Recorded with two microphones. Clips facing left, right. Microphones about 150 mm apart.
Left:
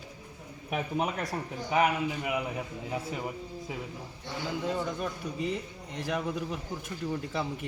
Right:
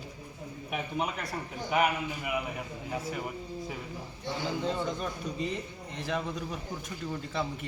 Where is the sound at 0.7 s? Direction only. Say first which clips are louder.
Left 3 dB; 40° left (ahead or behind).